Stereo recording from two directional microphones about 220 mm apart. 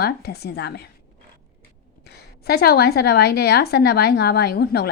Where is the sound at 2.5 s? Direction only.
45° left (ahead or behind).